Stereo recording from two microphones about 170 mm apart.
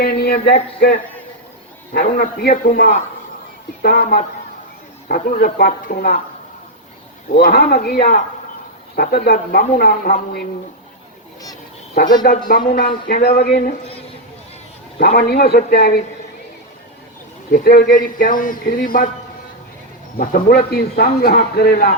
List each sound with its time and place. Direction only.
0.0 s a man's voice: 70° left (ahead or behind)
7.3 s a man's voice: 65° left (ahead or behind)
12.2 s a man's voice: 60° left (ahead or behind)
14.9 s speech: 70° left (ahead or behind)
17.5 s a man's voice: 60° left (ahead or behind)
20.1 s a man's voice: 60° left (ahead or behind)